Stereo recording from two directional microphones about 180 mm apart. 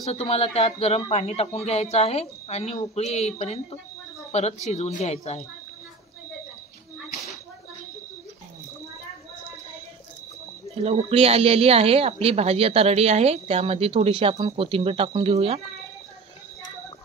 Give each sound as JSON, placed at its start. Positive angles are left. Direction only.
{"t": 0.1, "sound": "a man's voice", "side_deg": 35}
{"t": 10.8, "sound": "speech", "side_deg": -35}